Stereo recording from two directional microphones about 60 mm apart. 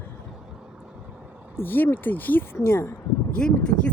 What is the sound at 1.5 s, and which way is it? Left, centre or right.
Speech, left.